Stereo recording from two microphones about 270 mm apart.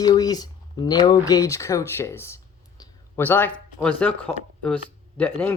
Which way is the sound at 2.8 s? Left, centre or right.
Centre.